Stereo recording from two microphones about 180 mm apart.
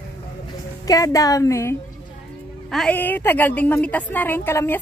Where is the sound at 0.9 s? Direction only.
20° left (ahead or behind).